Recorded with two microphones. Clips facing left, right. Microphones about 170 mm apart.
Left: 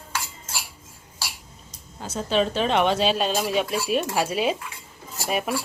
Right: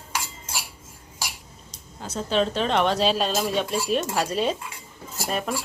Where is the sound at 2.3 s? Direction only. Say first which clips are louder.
Left 1 dB; 5° left (ahead or behind).